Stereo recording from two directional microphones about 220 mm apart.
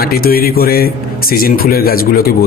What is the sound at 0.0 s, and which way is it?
Speech, 45° left (ahead or behind).